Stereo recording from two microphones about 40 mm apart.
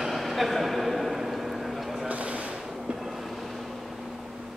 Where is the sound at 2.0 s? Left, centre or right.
Right.